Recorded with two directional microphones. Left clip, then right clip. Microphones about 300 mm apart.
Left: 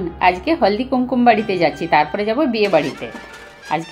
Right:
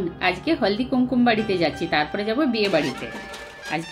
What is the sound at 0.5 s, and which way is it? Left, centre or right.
Speech, left.